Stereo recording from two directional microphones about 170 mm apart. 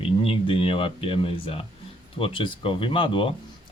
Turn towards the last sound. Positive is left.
turn(degrees=30)  # may be behind; listen again after turning